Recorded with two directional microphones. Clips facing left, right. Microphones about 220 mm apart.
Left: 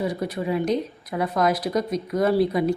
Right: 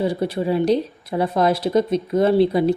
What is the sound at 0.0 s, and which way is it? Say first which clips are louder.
A woman's voice: right 5 dB; 30° right (ahead or behind).